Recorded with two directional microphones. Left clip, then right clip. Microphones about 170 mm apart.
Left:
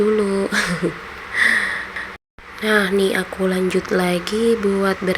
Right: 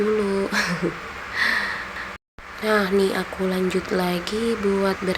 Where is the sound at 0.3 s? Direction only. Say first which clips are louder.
Left 3 dB; 15° left (ahead or behind).